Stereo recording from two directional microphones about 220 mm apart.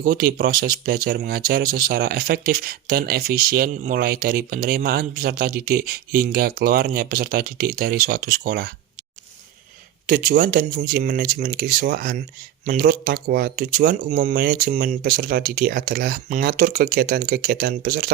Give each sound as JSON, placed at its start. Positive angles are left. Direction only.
{"t": 0.0, "sound": "speech", "side_deg": -40}
{"t": 10.1, "sound": "speech", "side_deg": -40}